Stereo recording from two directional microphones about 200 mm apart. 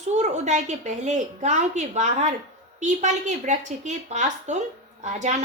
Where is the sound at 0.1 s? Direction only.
35° right (ahead or behind).